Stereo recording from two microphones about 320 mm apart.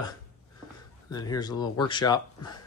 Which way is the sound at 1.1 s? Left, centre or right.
Centre.